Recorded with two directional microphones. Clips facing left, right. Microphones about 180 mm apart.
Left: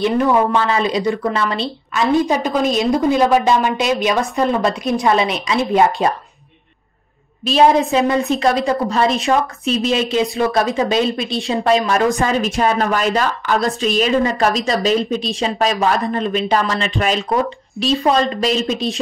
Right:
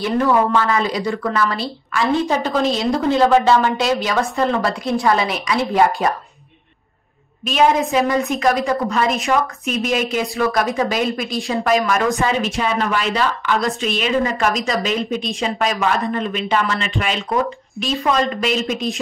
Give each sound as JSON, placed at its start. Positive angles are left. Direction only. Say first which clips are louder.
{"t": 0.0, "sound": "a woman's voice", "louder": "left 2 dB", "side_deg": 20}
{"t": 7.4, "sound": "a woman's voice", "louder": "left 3 dB", "side_deg": 35}
{"t": 12.2, "sound": "a woman's voice", "louder": "left 2 dB", "side_deg": 40}